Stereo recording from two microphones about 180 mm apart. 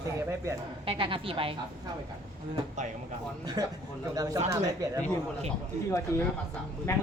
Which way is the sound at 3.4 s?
25° right (ahead or behind).